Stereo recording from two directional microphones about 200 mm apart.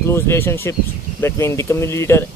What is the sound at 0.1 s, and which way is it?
Speech, 15° left (ahead or behind).